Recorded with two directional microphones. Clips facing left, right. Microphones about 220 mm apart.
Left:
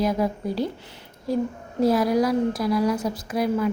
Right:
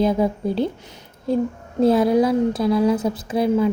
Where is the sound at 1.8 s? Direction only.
25° right (ahead or behind).